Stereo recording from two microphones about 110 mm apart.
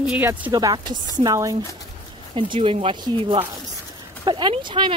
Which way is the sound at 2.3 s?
50° right (ahead or behind).